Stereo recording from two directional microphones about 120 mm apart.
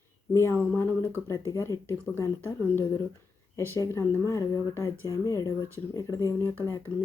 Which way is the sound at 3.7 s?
25° left (ahead or behind).